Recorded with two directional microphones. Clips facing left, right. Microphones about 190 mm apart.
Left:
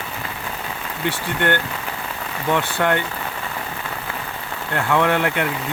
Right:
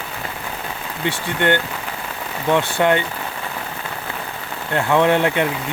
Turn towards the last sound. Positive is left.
turn(degrees=-20)  # may be behind; listen again after turning